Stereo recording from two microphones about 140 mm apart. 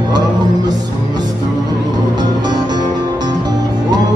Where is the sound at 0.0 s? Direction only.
30° right (ahead or behind).